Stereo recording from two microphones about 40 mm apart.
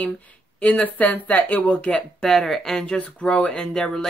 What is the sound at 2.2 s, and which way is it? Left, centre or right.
Speech, centre.